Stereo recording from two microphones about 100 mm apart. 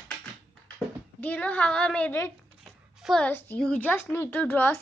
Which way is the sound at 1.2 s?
15° left (ahead or behind).